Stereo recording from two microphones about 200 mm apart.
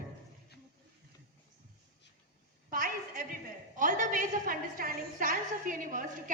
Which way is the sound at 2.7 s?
45° right (ahead or behind).